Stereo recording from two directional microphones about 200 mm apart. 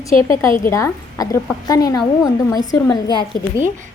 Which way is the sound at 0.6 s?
15° left (ahead or behind).